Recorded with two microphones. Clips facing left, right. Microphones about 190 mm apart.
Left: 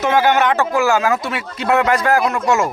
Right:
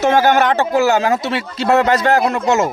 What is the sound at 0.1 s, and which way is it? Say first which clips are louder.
Speech: left 1 dB; 40° right (ahead or behind).